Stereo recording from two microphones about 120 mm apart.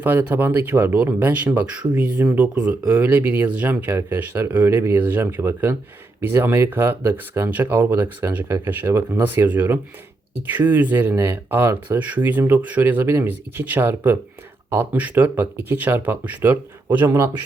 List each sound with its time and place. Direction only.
0.0 s speech: 15° right (ahead or behind)